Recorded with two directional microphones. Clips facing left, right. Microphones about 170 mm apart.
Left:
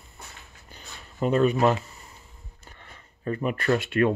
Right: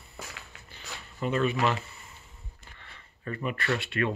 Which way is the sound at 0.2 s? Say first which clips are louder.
Right 4 dB; 90° right.